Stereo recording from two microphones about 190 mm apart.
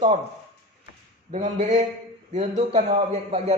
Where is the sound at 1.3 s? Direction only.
40° right (ahead or behind).